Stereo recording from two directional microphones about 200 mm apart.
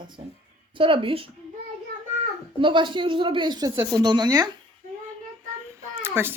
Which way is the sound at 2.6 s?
25° right (ahead or behind).